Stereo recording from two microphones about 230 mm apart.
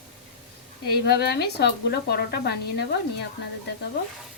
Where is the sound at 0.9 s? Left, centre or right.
Left.